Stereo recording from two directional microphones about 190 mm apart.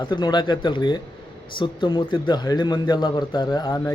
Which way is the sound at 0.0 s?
25° left (ahead or behind).